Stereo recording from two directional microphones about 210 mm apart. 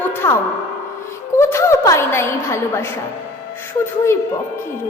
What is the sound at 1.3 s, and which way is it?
A woman's voice, 10° left (ahead or behind).